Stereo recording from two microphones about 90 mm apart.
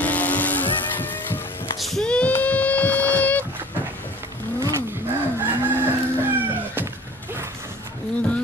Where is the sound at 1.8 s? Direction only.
Centre (ahead or behind).